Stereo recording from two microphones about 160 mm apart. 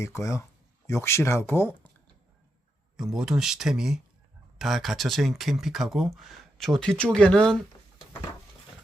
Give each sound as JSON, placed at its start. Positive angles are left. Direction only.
{"t": 0.0, "sound": "speech", "side_deg": 20}
{"t": 3.0, "sound": "speech", "side_deg": -5}